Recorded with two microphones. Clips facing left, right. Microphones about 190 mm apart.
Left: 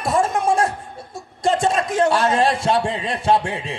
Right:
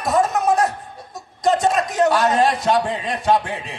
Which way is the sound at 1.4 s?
30° left (ahead or behind).